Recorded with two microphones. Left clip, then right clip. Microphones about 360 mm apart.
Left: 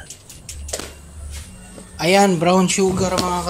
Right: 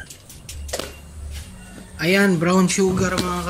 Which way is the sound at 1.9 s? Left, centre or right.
Centre.